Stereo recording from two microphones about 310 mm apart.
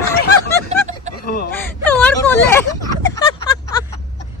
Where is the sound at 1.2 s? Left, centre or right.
Left.